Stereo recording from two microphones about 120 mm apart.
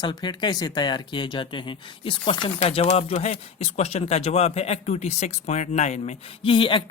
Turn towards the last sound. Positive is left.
turn(degrees=45)  # may be behind; listen again after turning